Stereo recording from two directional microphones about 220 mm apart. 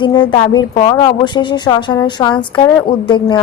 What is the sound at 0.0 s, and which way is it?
A woman's voice, 20° left (ahead or behind).